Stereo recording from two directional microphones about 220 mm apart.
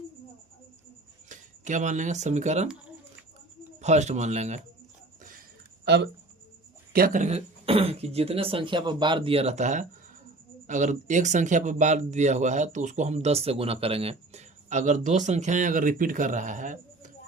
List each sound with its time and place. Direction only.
1.3 s speech: 35° right (ahead or behind)
3.8 s speech: 30° right (ahead or behind)
5.8 s speech: 50° right (ahead or behind)
6.9 s speech: 40° right (ahead or behind)